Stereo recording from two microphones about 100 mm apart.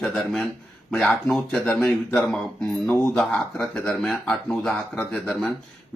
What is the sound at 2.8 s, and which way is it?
Speech, 20° left (ahead or behind).